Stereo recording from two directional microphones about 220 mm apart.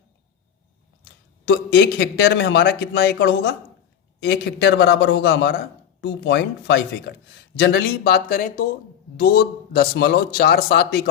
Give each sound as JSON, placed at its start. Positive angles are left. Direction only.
{"t": 1.5, "sound": "a man's voice", "side_deg": 50}